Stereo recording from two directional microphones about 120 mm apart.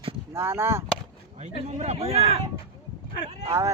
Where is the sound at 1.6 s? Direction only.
65° right (ahead or behind).